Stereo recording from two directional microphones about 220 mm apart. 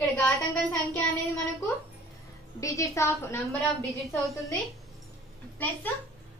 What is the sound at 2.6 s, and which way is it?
Speech, 15° left (ahead or behind).